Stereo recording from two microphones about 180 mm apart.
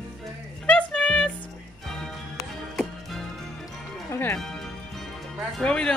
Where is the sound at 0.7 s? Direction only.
5° left (ahead or behind).